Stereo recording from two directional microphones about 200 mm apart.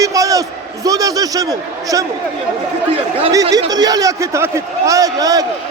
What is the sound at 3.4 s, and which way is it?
A man's voice, 25° right (ahead or behind).